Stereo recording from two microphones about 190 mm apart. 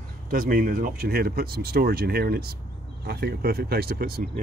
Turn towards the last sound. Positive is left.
turn(degrees=-55)  # may be behind; listen again after turning